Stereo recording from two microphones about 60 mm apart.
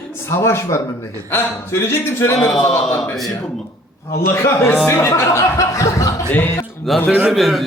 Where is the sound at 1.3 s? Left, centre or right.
Left.